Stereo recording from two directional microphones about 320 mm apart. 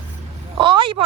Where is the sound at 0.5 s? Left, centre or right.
Centre.